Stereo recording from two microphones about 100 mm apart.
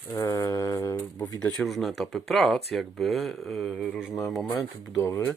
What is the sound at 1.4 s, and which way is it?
Mantra, 10° left (ahead or behind).